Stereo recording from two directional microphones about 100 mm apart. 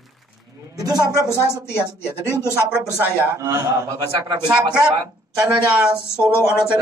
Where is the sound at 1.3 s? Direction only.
25° left (ahead or behind).